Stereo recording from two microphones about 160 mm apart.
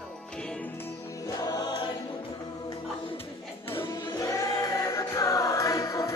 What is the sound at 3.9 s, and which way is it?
Music, 20° left (ahead or behind).